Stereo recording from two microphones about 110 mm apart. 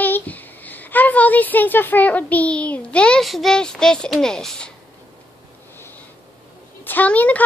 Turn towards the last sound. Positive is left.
turn(degrees=15)  # may be behind; listen again after turning